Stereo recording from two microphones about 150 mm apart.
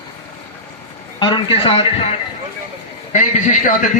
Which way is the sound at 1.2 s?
35° left (ahead or behind).